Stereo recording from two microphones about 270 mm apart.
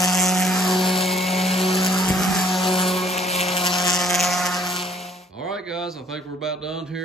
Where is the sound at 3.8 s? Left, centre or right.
Centre.